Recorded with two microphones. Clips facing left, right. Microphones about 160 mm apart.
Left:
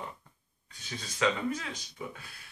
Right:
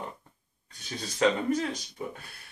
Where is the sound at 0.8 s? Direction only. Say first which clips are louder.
Right 4 dB; 40° right (ahead or behind).